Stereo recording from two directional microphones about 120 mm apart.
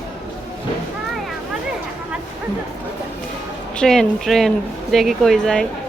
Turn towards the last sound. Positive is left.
turn(degrees=5)  # may be behind; listen again after turning